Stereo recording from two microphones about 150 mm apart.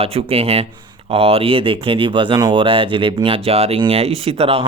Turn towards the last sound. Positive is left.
turn(degrees=-40)  # may be behind; listen again after turning